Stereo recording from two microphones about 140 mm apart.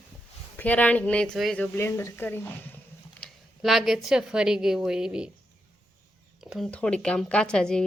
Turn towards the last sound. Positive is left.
turn(degrees=5)  # may be behind; listen again after turning